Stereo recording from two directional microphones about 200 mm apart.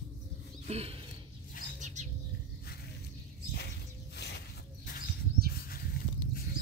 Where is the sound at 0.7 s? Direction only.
30° right (ahead or behind).